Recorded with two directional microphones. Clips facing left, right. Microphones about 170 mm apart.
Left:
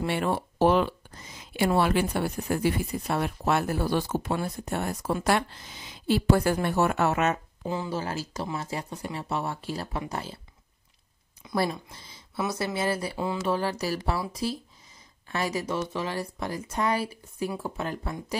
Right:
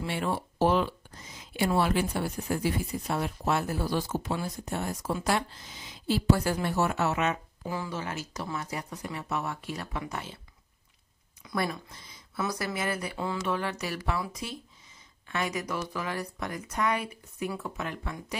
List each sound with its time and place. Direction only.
0.0 s speech: 60° left (ahead or behind)
7.6 s speech: 25° left (ahead or behind)
11.4 s speech: 25° left (ahead or behind)